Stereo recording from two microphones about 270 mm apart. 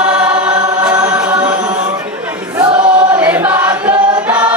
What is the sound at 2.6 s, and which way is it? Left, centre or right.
Choir, centre.